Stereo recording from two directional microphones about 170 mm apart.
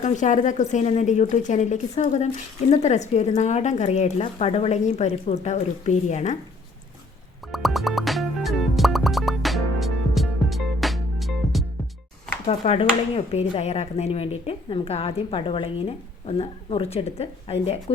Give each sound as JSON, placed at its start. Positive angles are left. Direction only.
{"t": 0.0, "sound": "a woman's voice", "side_deg": 45}
{"t": 7.5, "sound": "music", "side_deg": 0}
{"t": 12.5, "sound": "speech", "side_deg": 35}